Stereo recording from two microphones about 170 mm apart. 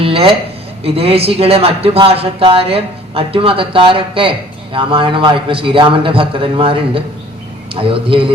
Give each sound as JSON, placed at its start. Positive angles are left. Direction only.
{"t": 0.0, "sound": "speech", "side_deg": -35}